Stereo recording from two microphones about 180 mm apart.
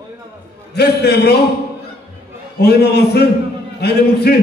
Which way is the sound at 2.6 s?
65° left (ahead or behind).